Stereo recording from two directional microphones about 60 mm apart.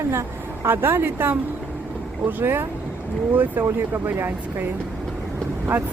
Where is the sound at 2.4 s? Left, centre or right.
Right.